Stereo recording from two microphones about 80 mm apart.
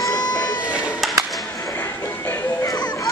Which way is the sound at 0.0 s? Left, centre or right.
Left.